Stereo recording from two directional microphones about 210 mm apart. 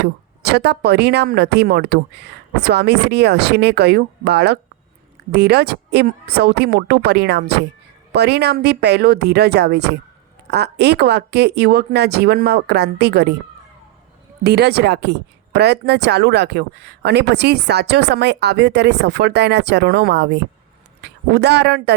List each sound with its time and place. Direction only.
0.4 s a woman's voice: 50° right (ahead or behind)
14.4 s a woman's voice: 50° right (ahead or behind)